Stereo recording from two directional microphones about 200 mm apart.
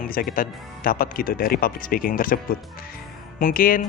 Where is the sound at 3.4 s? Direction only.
45° left (ahead or behind).